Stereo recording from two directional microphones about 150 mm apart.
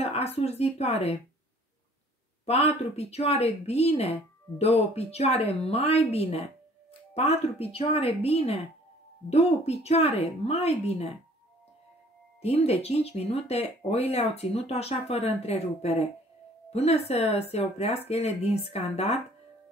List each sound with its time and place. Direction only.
0.0 s a woman's voice: 45° left (ahead or behind)
2.4 s a woman's voice: 45° left (ahead or behind)
12.4 s a woman's voice: 45° left (ahead or behind)